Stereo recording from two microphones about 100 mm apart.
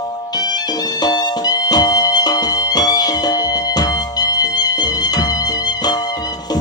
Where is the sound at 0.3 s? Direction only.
40° left (ahead or behind).